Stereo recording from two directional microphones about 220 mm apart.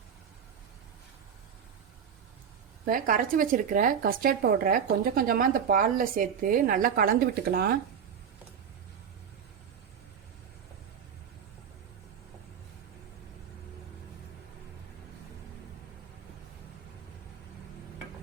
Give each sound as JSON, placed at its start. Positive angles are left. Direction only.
{"t": 2.8, "sound": "speech", "side_deg": -40}